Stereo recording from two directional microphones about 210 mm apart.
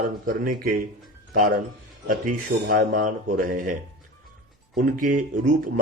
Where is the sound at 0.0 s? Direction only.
40° right (ahead or behind).